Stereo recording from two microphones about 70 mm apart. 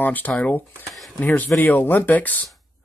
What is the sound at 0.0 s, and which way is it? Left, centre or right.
Speech, left.